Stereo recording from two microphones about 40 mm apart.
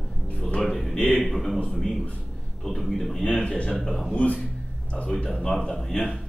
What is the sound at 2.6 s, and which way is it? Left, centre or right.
Speech, centre.